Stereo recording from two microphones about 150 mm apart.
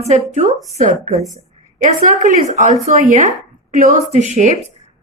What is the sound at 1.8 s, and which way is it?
A woman's voice, 60° right (ahead or behind).